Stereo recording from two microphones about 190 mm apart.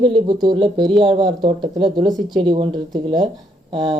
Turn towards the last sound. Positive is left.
turn(degrees=-25)  # may be behind; listen again after turning